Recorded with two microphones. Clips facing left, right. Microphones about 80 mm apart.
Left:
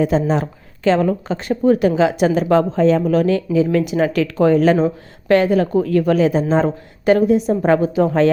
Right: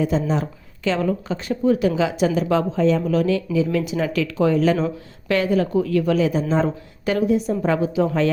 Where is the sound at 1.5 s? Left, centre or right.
Left.